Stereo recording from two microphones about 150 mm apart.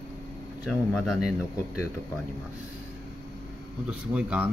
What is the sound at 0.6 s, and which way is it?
Speech, 5° right (ahead or behind).